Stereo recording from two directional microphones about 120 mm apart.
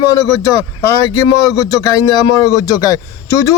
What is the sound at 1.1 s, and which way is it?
A man's voice, 30° left (ahead or behind).